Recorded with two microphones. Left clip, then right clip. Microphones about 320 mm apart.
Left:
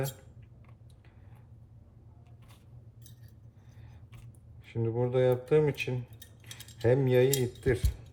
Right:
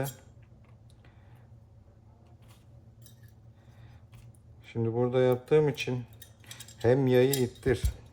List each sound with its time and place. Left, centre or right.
4.6 s speech: centre